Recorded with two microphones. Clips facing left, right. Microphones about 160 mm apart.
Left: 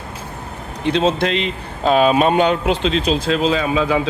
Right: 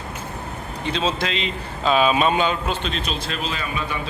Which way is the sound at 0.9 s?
65° left (ahead or behind).